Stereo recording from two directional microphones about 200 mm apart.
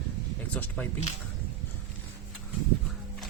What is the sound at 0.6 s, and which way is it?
Speech, 10° left (ahead or behind).